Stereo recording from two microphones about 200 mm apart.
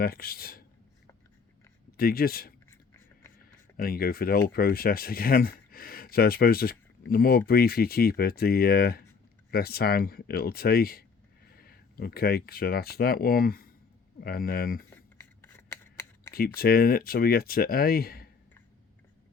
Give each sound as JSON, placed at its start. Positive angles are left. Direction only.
{"t": 0.0, "sound": "speech", "side_deg": 50}
{"t": 2.0, "sound": "speech", "side_deg": 50}
{"t": 2.6, "sound": "a sound", "side_deg": 15}
{"t": 3.8, "sound": "speech", "side_deg": 45}
{"t": 14.8, "sound": "scissors", "side_deg": 10}
{"t": 16.6, "sound": "speech", "side_deg": 50}